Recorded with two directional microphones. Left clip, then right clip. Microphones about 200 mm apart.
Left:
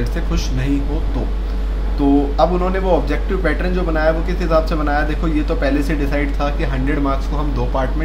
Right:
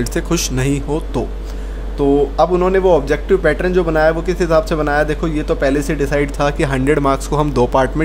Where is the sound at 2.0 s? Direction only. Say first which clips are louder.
Right 2 dB; 45° right (ahead or behind).